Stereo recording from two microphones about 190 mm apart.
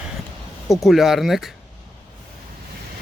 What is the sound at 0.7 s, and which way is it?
Speech, centre (ahead or behind).